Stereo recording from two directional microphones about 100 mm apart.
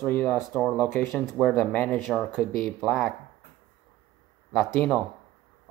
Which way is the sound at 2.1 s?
Centre (ahead or behind).